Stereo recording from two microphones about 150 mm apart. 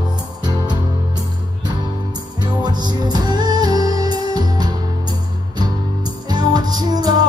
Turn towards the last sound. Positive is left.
turn(degrees=-25)  # may be behind; listen again after turning